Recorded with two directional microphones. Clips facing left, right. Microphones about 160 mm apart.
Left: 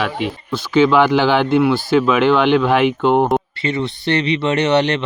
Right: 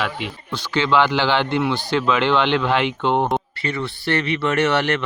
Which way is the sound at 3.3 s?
20° left (ahead or behind).